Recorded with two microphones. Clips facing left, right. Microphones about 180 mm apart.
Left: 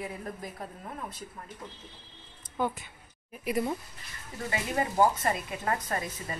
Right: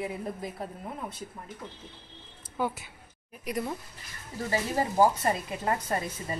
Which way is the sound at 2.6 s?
10° right (ahead or behind).